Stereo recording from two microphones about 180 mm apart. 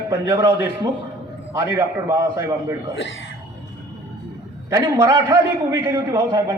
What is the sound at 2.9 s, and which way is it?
Speech, 90° left.